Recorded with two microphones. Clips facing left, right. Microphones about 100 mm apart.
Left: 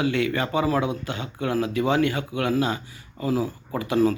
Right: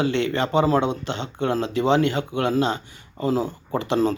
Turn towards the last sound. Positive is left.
turn(degrees=-25)  # may be behind; listen again after turning